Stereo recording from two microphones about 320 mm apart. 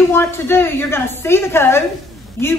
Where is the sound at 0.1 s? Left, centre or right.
Centre.